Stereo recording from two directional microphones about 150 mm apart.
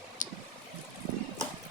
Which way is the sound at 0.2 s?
60° left (ahead or behind).